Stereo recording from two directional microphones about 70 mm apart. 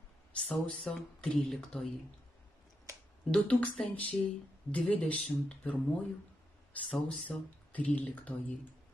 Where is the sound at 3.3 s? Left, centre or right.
Centre.